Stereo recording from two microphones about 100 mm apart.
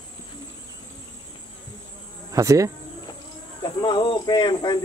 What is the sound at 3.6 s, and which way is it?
Speech, 50° left (ahead or behind).